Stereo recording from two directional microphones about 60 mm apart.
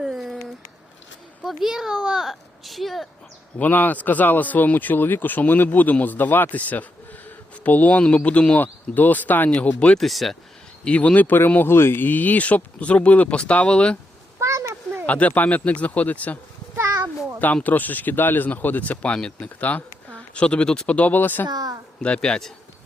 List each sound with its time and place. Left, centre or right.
0.0 s a sound: centre
1.5 s a child's voice: centre
3.6 s speech: left
8.6 s speech: left
10.0 s speech: centre
10.8 s speech: left
14.3 s a sound: right
15.0 s speech: left
17.4 s speech: left
21.5 s a woman's voice: right
22.0 s a man's voice: centre